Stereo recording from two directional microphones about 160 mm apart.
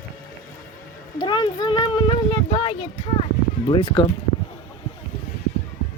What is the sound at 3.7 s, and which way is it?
Speech, 35° left (ahead or behind).